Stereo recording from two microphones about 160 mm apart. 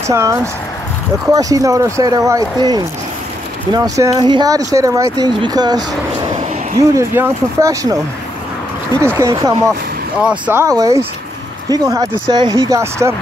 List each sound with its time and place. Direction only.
0.1 s speech: 15° right (ahead or behind)
9.2 s speech: 20° right (ahead or behind)